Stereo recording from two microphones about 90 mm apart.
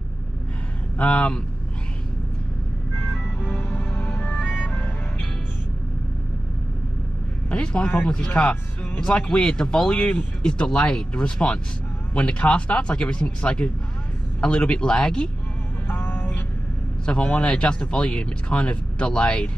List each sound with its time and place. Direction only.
0.9 s speech: 15° left (ahead or behind)
3.5 s music: 10° left (ahead or behind)
7.5 s speech: 15° left (ahead or behind)
15.9 s vehicle: 20° left (ahead or behind)
17.0 s speech: 10° left (ahead or behind)